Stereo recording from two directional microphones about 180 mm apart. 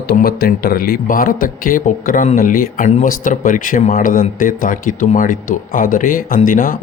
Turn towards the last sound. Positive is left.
turn(degrees=50)  # may be behind; listen again after turning